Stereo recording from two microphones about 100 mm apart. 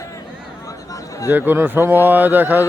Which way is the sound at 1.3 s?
20° right (ahead or behind).